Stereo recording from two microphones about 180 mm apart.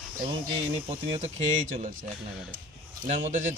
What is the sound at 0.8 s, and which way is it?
Speech, 30° right (ahead or behind).